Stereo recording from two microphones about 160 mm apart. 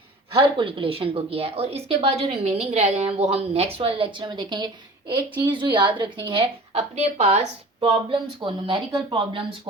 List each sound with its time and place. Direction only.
0.3 s speech: 35° right (ahead or behind)
6.7 s speech: 40° right (ahead or behind)